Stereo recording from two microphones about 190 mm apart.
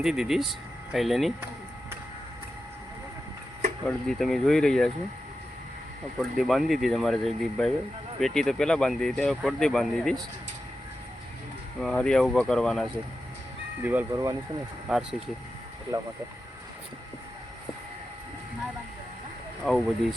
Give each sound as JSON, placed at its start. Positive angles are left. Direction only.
{"t": 0.0, "sound": "speech", "side_deg": 0}
{"t": 3.8, "sound": "speech", "side_deg": 0}
{"t": 6.3, "sound": "speech", "side_deg": 0}
{"t": 11.8, "sound": "speech", "side_deg": 5}
{"t": 13.8, "sound": "speech", "side_deg": -15}
{"t": 14.9, "sound": "speech", "side_deg": 0}
{"t": 15.9, "sound": "speech", "side_deg": -20}
{"t": 19.6, "sound": "speech", "side_deg": 0}